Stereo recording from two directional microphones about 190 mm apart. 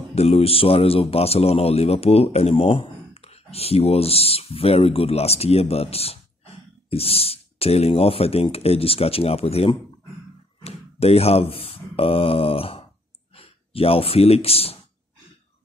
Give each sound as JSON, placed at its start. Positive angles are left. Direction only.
{"t": 0.1, "sound": "a man's voice", "side_deg": 35}
{"t": 10.6, "sound": "a sound", "side_deg": 30}
{"t": 13.3, "sound": "speech", "side_deg": 30}